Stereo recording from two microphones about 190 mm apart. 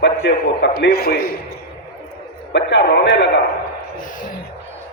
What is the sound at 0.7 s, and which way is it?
Speech, 55° left (ahead or behind).